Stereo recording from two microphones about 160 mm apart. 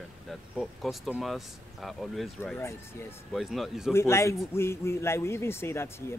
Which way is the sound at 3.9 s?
15° left (ahead or behind).